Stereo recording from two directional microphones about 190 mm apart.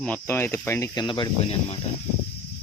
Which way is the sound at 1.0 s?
25° left (ahead or behind).